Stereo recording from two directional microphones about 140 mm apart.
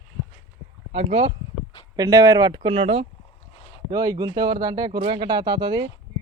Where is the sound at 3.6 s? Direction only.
40° left (ahead or behind).